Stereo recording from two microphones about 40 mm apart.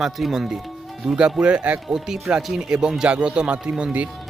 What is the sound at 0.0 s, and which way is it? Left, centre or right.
Speech, centre.